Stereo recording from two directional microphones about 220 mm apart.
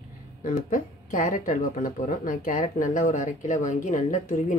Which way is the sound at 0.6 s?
35° left (ahead or behind).